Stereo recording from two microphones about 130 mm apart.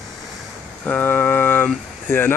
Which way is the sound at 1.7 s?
15° left (ahead or behind).